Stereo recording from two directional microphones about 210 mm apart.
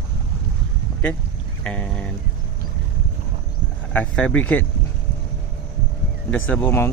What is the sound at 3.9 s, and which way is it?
Speech, 5° left (ahead or behind).